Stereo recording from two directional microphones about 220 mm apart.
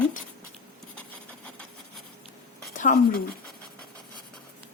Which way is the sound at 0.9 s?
5° left (ahead or behind).